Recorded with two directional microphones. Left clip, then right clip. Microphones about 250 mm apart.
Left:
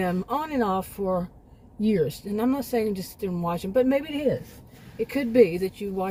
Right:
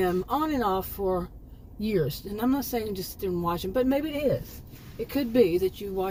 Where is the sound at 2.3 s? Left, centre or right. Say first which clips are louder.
Left 2 dB; centre.